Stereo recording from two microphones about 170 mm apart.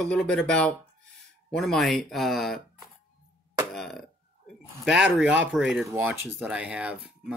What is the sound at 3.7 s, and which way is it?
Speech, centre (ahead or behind).